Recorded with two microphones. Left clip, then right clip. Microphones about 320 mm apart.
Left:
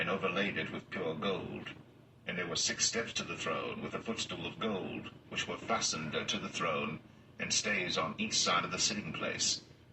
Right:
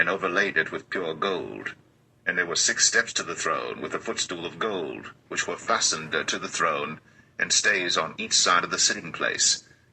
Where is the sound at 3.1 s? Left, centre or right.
Right.